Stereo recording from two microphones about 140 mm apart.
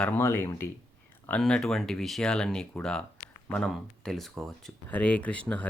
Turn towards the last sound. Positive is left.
turn(degrees=10)  # may be behind; listen again after turning